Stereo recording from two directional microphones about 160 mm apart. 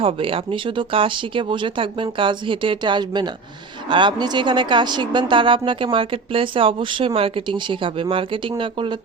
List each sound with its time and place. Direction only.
0.0 s a woman's voice: 35° right (ahead or behind)